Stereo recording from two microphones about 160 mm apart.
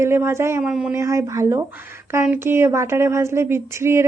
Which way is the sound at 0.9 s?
15° right (ahead or behind).